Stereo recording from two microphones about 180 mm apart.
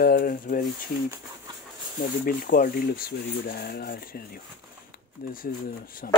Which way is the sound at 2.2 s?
50° left (ahead or behind).